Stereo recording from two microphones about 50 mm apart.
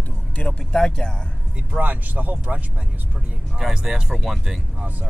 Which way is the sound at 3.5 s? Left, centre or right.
Centre.